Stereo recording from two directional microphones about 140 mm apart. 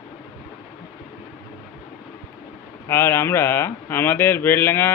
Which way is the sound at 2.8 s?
20° left (ahead or behind).